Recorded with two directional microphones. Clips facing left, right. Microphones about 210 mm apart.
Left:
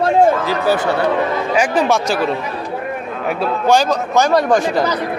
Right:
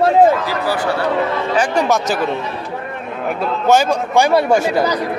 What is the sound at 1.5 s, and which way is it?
Speech, 5° left (ahead or behind).